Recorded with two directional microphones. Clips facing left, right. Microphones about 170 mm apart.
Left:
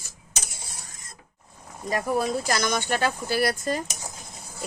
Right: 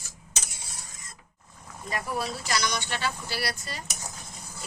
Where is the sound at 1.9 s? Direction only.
40° left (ahead or behind).